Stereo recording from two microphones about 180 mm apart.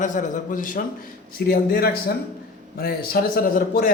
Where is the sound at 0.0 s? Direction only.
45° left (ahead or behind).